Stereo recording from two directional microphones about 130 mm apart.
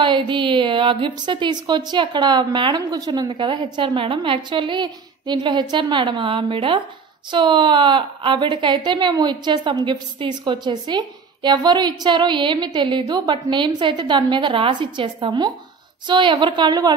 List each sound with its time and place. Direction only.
0.0 s a woman's voice: 40° right (ahead or behind)